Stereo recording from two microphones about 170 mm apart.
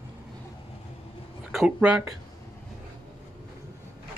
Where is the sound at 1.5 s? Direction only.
5° right (ahead or behind).